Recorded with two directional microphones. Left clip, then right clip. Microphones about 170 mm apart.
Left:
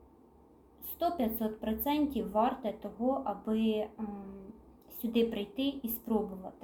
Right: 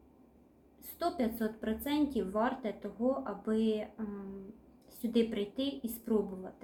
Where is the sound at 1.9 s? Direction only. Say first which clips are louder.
Left 1 dB; 25° left (ahead or behind).